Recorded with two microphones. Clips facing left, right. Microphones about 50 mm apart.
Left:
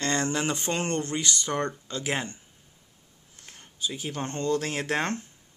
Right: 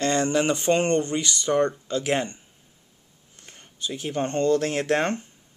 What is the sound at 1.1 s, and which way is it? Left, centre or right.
Speech, centre.